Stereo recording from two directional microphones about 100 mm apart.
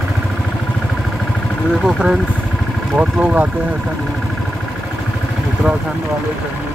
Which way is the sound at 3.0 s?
15° right (ahead or behind).